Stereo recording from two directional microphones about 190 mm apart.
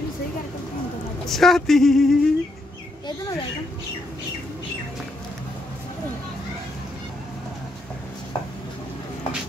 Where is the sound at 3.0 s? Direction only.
20° left (ahead or behind).